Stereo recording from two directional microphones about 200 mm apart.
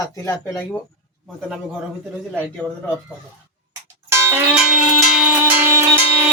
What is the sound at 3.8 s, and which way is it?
Music, 10° right (ahead or behind).